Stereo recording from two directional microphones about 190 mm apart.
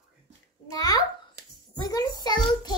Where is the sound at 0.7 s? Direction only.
20° left (ahead or behind).